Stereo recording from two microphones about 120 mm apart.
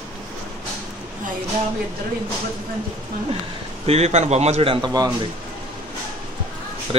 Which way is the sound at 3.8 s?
60° right (ahead or behind).